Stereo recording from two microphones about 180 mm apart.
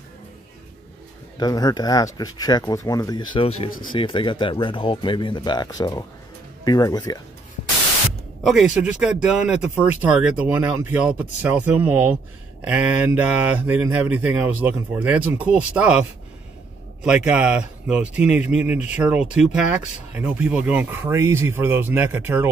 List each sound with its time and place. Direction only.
1.4 s speech: 20° left (ahead or behind)
8.5 s speech: 5° right (ahead or behind)